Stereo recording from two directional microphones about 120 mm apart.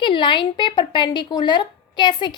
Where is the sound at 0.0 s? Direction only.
40° left (ahead or behind).